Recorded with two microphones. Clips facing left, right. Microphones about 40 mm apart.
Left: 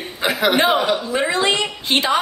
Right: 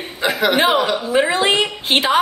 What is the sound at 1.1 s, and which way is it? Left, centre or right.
A woman's voice, centre.